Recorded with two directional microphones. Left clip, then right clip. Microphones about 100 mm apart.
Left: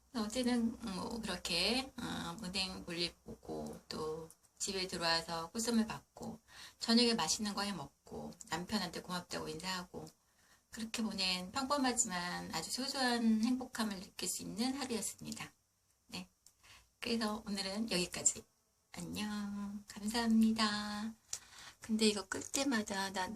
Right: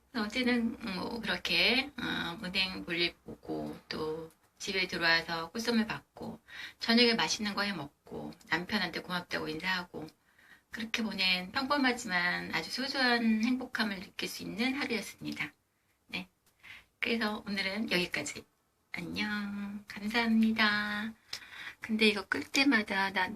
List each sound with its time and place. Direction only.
0.1 s a woman's voice: 40° left (ahead or behind)
3.8 s a sound: 35° left (ahead or behind)
4.6 s a woman's voice: 40° left (ahead or behind)
11.1 s a woman's voice: 40° left (ahead or behind)
17.0 s a woman's voice: 40° left (ahead or behind); by 23.2 s 15° left (ahead or behind)